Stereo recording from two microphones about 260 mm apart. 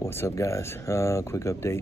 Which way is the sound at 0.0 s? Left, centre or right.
Centre.